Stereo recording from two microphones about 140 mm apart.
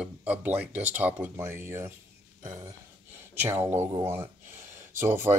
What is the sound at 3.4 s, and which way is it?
Speech, 15° right (ahead or behind).